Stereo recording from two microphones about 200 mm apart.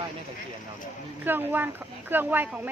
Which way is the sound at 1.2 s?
10° right (ahead or behind).